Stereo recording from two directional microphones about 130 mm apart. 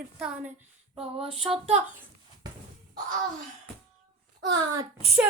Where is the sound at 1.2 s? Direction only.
45° right (ahead or behind).